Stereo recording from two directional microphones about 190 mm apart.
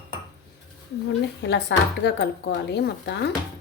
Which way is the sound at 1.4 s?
65° left (ahead or behind).